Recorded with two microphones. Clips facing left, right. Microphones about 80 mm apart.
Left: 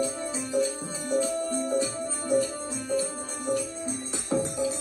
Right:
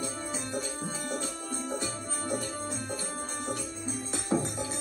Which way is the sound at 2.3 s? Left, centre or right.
Right.